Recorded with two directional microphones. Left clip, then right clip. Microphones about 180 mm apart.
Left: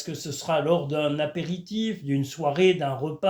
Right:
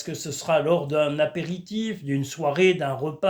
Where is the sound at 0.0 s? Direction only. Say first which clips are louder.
Right 2 dB; 20° right (ahead or behind).